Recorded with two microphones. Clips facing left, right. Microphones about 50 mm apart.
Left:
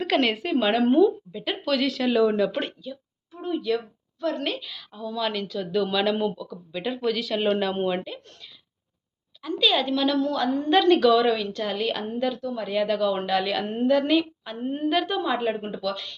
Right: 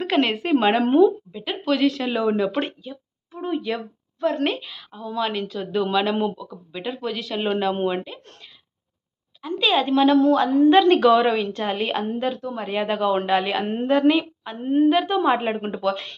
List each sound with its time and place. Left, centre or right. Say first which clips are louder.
0.0 s a woman's voice: right 2 dB; centre
1.3 s a woman's voice: right 2 dB; centre; by 4.7 s right
4.7 s a woman's voice: right 2 dB; centre
6.8 s speech: left 2 dB; centre
9.4 s a woman's voice: right 2 dB; right
10.2 s speech: right 8 dB; right
11.0 s a woman's voice: right 3 dB; right
14.1 s a woman's voice: right 2 dB; centre
14.9 s speech: right 4 dB; centre
15.2 s speech: right 4 dB; right